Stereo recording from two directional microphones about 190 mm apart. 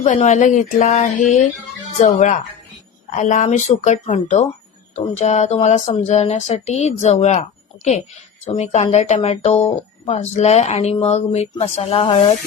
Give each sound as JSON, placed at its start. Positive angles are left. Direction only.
{"t": 0.0, "sound": "speech", "side_deg": 40}
{"t": 8.5, "sound": "speech", "side_deg": 35}